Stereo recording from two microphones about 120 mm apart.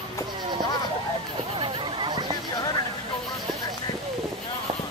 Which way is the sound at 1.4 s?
45° right (ahead or behind).